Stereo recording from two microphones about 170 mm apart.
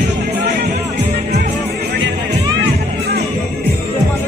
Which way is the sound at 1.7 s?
70° right (ahead or behind).